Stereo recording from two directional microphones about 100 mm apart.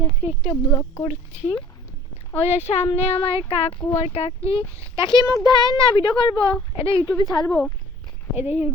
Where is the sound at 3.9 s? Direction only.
90° left; by 4.6 s 70° left (ahead or behind).